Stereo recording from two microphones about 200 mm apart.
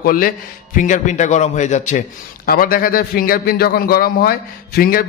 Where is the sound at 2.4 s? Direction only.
45° left (ahead or behind).